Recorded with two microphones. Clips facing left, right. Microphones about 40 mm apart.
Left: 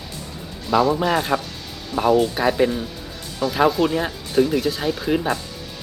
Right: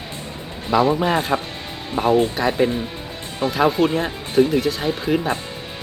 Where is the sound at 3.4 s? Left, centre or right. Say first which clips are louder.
Right 1 dB; right.